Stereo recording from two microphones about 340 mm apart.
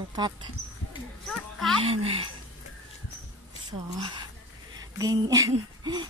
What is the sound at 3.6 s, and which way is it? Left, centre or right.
A woman's voice, centre.